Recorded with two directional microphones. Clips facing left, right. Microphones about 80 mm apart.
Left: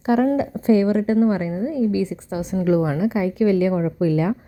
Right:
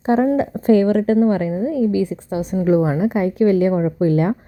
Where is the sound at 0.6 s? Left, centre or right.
Right.